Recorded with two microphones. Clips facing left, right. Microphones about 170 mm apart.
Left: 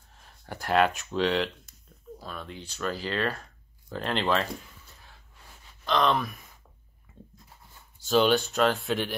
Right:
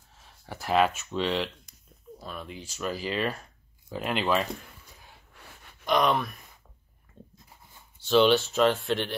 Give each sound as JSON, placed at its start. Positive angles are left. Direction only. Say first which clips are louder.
{"t": 0.1, "sound": "speech", "louder": "left 1 dB", "side_deg": 0}
{"t": 5.3, "sound": "gasp", "louder": "right 3 dB", "side_deg": -60}
{"t": 5.9, "sound": "speech", "louder": "right 1 dB", "side_deg": -15}
{"t": 6.1, "sound": "speech", "louder": "even", "side_deg": 0}
{"t": 7.1, "sound": "a sound", "louder": "even", "side_deg": 10}
{"t": 8.1, "sound": "speech", "louder": "right 2 dB", "side_deg": 0}